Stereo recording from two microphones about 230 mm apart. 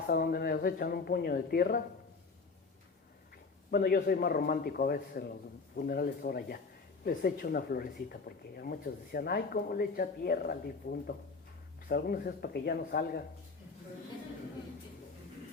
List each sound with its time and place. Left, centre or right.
0.1 s speech: left
3.7 s speech: left